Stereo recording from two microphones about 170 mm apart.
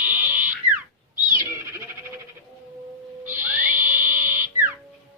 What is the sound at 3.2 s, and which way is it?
Owl, 10° right (ahead or behind).